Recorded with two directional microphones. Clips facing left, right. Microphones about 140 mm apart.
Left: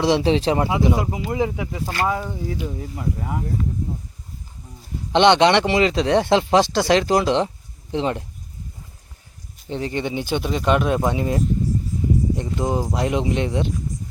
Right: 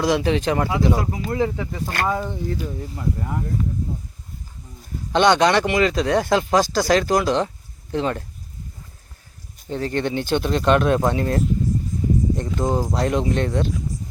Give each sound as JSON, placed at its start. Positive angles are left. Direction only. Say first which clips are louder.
{"t": 0.0, "sound": "speech", "louder": "left 2 dB", "side_deg": 30}
{"t": 5.1, "sound": "speech", "louder": "left 2 dB", "side_deg": 25}
{"t": 9.6, "sound": "speech", "louder": "right 2 dB", "side_deg": 20}